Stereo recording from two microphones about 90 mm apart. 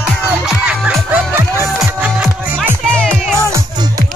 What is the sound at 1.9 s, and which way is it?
Music, 15° right (ahead or behind).